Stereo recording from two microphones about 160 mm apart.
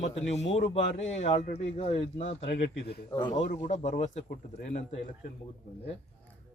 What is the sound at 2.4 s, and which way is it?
Speech, 90° left.